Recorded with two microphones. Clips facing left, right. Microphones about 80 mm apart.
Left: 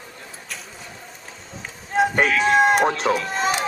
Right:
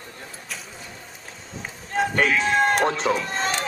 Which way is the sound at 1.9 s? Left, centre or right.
Centre.